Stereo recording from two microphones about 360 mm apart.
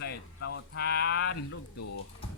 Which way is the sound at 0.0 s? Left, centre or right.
Left.